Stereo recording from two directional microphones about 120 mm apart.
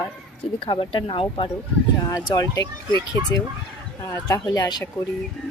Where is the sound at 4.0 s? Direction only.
25° left (ahead or behind).